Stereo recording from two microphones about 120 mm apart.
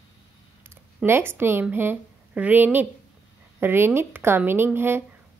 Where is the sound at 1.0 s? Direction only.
20° right (ahead or behind).